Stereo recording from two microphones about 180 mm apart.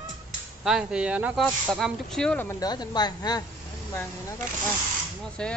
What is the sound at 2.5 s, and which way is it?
Speech, 20° left (ahead or behind).